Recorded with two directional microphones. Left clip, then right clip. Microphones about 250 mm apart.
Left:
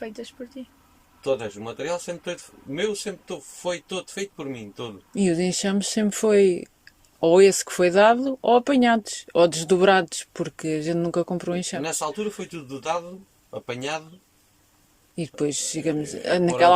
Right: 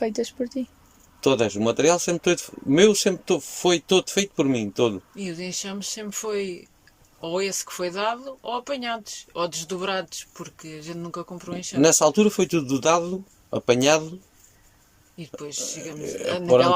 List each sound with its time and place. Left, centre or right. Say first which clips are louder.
0.0 s speech: right 10 dB; centre
1.2 s speech: right 6 dB; right
5.1 s speech: left 8 dB; left
11.8 s speech: right 10 dB; right
15.1 s speech: left 8 dB; left